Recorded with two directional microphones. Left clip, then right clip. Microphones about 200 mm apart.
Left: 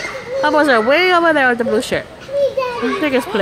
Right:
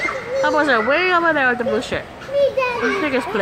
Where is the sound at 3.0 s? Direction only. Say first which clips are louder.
Left 3 dB; 30° left (ahead or behind).